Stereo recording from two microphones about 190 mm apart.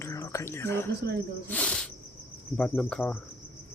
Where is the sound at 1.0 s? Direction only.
60° right (ahead or behind).